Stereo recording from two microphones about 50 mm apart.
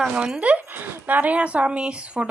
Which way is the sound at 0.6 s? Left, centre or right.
Right.